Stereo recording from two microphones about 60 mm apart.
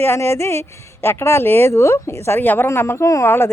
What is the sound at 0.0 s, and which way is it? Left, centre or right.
Speech, left.